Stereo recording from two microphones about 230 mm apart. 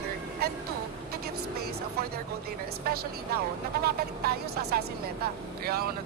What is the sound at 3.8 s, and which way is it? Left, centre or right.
A woman's voice, right.